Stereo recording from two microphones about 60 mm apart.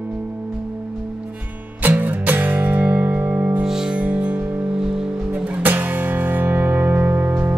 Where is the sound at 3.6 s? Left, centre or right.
Centre.